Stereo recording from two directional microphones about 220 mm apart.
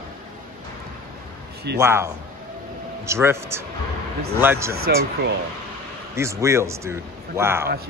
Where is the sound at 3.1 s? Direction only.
10° right (ahead or behind).